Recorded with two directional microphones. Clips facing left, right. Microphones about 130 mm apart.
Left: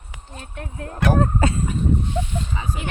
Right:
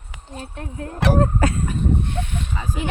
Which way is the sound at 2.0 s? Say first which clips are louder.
Left 1 dB; 60° right (ahead or behind).